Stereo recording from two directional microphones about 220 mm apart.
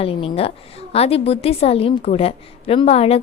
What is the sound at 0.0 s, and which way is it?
A woman's voice, 25° left (ahead or behind).